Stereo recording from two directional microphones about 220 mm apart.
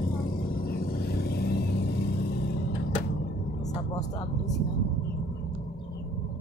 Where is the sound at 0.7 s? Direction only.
45° left (ahead or behind).